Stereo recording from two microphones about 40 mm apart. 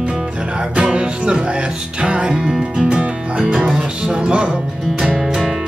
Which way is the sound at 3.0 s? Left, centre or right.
Right.